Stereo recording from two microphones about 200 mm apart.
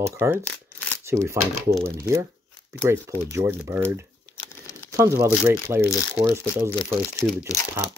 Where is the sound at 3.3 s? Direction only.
15° right (ahead or behind).